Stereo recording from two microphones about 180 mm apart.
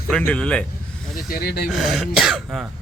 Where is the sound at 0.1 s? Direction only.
5° left (ahead or behind).